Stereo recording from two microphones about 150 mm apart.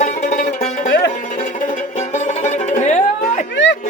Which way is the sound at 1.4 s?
55° left (ahead or behind).